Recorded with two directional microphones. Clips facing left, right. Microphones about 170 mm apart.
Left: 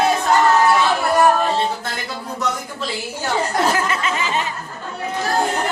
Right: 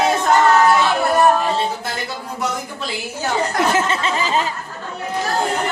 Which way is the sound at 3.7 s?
30° right (ahead or behind).